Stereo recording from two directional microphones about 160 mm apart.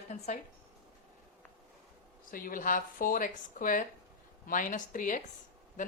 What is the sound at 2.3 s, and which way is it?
A woman's voice, 60° left (ahead or behind).